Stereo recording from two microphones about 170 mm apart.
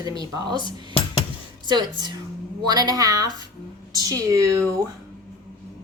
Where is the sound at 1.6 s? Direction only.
25° right (ahead or behind).